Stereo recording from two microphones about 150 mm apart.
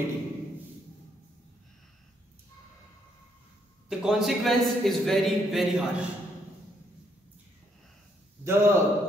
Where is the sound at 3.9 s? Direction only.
Centre (ahead or behind).